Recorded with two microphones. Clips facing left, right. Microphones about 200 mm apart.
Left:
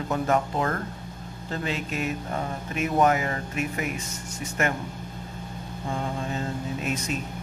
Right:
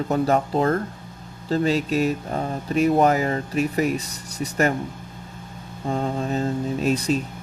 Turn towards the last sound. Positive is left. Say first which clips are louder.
# right 8 dB
turn(degrees=-35)  # may be behind; listen again after turning